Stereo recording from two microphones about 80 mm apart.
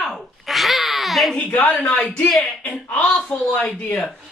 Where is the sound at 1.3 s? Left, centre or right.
Centre.